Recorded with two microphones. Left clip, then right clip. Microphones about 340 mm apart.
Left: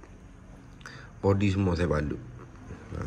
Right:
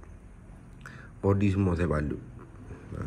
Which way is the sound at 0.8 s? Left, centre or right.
Centre.